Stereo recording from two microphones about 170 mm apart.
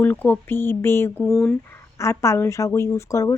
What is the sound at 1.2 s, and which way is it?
Speech, 5° left (ahead or behind).